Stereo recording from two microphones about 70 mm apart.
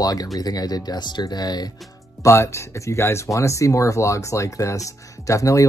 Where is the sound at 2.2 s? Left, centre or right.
Left.